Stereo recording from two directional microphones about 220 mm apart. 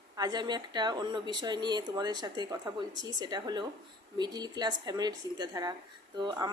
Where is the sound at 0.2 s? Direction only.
20° right (ahead or behind).